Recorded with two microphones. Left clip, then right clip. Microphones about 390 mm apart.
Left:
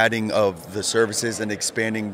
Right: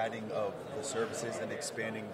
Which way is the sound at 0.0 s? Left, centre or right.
Left.